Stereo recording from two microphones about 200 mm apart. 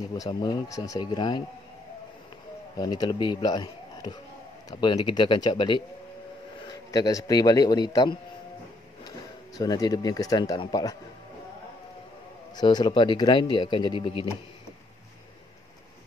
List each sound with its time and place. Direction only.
0.1 s speech: 20° left (ahead or behind)
2.8 s speech: 20° left (ahead or behind)
9.6 s speech: 20° left (ahead or behind)
12.5 s speech: 20° left (ahead or behind)